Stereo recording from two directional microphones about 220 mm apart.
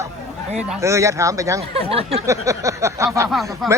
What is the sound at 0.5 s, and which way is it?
Speech, 5° right (ahead or behind).